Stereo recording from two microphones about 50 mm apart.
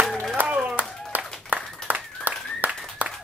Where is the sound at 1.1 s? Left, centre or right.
Right.